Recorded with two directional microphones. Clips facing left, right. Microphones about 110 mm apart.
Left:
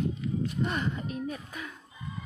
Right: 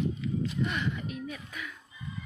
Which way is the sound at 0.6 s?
40° left (ahead or behind).